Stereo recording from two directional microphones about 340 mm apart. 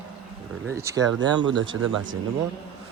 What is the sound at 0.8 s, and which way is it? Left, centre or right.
Speech, centre.